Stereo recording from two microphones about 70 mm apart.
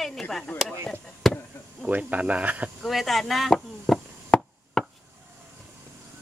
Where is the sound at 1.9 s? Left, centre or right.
Right.